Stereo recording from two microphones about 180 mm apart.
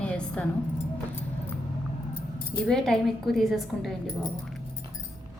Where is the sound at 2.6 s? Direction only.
5° left (ahead or behind).